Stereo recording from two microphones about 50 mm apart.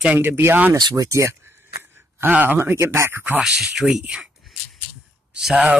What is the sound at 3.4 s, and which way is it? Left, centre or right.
Speech, centre.